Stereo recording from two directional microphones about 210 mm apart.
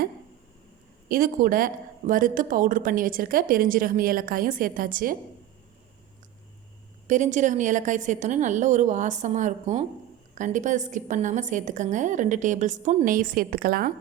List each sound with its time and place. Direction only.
1.0 s a woman's voice: 45° right (ahead or behind)
7.1 s a woman's voice: 35° right (ahead or behind)